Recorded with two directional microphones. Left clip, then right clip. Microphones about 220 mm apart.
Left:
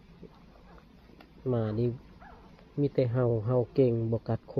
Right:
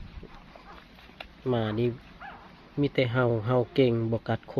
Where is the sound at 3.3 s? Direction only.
20° right (ahead or behind).